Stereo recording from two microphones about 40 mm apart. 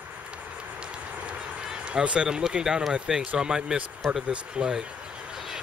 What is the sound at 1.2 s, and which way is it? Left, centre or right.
Run, centre.